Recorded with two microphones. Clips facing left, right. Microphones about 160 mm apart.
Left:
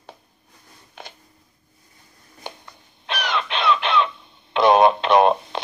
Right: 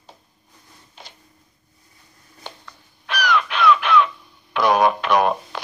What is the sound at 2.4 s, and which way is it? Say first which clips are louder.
Crow: left 2 dB; 15° left (ahead or behind).